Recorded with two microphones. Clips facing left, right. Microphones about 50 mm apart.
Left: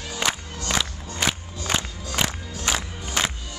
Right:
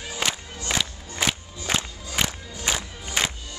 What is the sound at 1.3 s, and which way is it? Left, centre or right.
Music, centre.